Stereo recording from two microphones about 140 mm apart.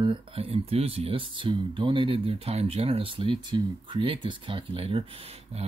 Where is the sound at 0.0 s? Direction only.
40° right (ahead or behind).